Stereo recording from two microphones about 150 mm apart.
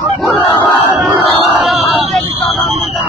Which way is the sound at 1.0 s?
Centre (ahead or behind).